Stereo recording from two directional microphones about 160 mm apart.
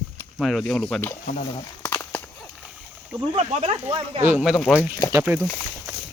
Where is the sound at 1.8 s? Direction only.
15° left (ahead or behind).